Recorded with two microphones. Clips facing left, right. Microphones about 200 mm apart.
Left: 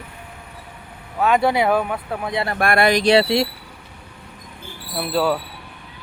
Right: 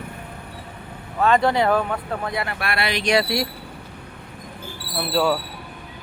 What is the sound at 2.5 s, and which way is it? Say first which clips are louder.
Speech: left 8 dB; 50° left (ahead or behind).